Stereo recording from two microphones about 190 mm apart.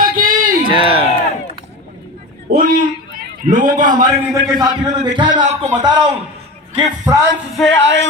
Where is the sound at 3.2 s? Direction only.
45° right (ahead or behind).